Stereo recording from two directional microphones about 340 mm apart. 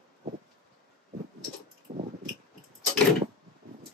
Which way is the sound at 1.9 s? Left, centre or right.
Centre.